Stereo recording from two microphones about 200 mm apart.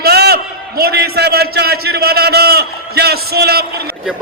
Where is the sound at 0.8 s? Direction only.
50° right (ahead or behind).